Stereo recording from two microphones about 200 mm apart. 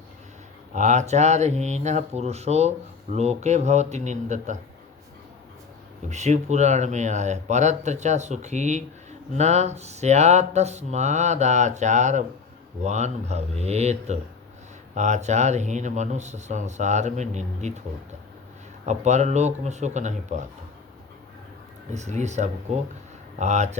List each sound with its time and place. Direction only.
0.7 s speech: 35° right (ahead or behind)
6.1 s speech: 35° right (ahead or behind)
18.9 s speech: 35° right (ahead or behind)
21.9 s speech: 35° right (ahead or behind)